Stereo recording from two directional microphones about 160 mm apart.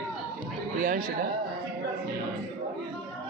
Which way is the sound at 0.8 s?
55° right (ahead or behind).